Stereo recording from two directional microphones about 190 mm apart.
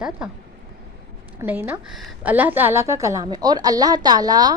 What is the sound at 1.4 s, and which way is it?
A woman's voice, 10° right (ahead or behind).